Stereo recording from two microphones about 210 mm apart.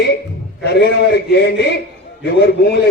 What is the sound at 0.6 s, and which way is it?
A man's voice, 50° left (ahead or behind).